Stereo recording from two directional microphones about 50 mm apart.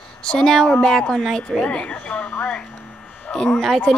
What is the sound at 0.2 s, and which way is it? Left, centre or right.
A woman's voice, centre.